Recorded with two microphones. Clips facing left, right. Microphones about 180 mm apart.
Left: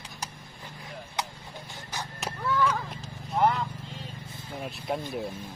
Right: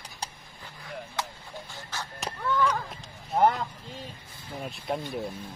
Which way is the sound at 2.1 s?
5° left (ahead or behind).